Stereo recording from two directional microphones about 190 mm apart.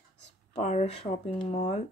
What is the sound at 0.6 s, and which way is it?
Speech, 35° left (ahead or behind).